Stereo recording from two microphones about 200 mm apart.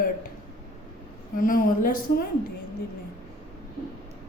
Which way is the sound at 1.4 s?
45° left (ahead or behind).